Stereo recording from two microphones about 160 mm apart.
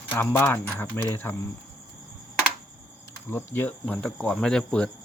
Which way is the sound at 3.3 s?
15° left (ahead or behind).